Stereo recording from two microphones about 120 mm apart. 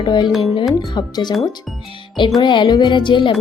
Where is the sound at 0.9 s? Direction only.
35° left (ahead or behind).